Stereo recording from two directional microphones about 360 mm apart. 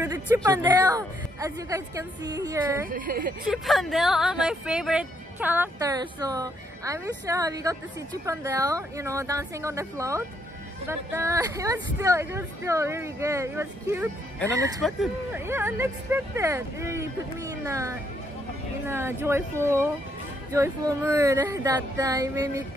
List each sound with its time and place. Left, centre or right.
0.0 s speech: centre
2.9 s a woman's voice: right
3.4 s speech: centre